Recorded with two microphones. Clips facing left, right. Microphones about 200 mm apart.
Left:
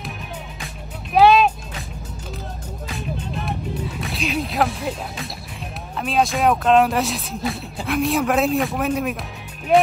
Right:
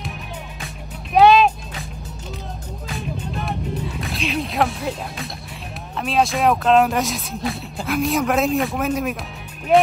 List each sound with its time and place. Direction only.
1.1 s music: centre (ahead or behind)
3.3 s music: centre (ahead or behind)
5.9 s speech: centre (ahead or behind)